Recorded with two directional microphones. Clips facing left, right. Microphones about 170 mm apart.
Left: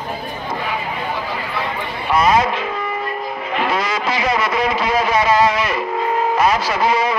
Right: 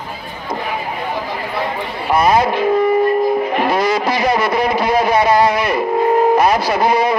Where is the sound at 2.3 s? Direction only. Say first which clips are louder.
Right 4 dB; 35° right (ahead or behind).